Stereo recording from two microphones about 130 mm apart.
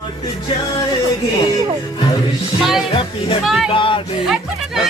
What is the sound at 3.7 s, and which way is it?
Speech, 40° left (ahead or behind).